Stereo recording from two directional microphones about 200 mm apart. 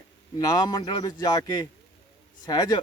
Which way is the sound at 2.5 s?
20° left (ahead or behind).